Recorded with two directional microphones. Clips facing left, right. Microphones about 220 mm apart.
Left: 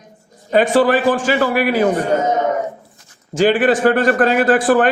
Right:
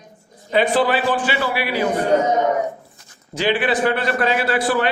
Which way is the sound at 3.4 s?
45° left (ahead or behind).